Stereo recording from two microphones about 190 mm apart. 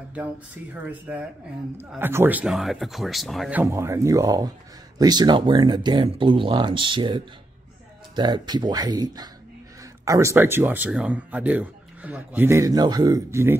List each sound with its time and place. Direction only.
0.8 s speech: 5° right (ahead or behind)
3.6 s speech: 15° right (ahead or behind)